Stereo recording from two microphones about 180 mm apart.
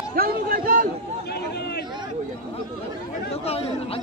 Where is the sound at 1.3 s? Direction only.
65° left (ahead or behind).